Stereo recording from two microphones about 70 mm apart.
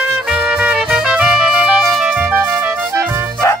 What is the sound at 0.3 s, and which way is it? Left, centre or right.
Music, centre.